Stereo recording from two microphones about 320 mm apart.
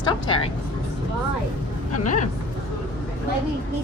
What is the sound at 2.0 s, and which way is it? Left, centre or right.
Speech, left.